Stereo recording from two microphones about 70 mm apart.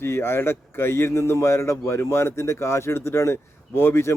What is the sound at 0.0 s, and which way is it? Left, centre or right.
Speech, left.